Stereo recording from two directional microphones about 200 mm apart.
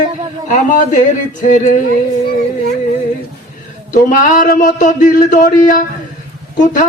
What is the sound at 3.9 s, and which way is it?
A man's voice, 40° left (ahead or behind).